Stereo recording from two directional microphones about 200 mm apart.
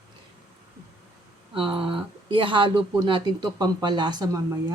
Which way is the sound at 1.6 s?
25° right (ahead or behind).